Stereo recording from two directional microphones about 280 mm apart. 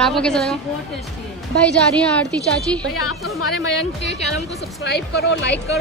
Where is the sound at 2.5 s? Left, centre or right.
Centre.